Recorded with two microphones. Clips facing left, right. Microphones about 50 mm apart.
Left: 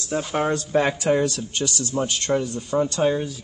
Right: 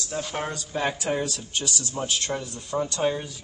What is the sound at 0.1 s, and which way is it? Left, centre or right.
Speech, centre.